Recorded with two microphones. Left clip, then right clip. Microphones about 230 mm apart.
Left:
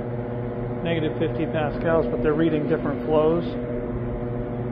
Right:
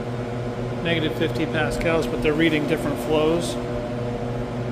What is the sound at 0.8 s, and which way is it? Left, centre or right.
Speech, centre.